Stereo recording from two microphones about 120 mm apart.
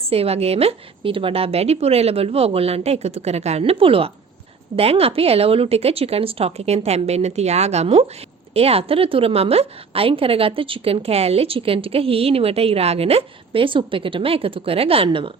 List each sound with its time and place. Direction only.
0.0 s speech: 55° right (ahead or behind)
3.6 s a woman's voice: 50° right (ahead or behind)